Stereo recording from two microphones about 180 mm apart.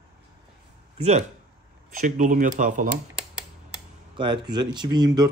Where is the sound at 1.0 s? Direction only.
40° right (ahead or behind).